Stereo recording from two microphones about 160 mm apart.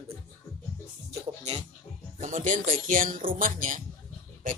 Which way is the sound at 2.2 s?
50° right (ahead or behind).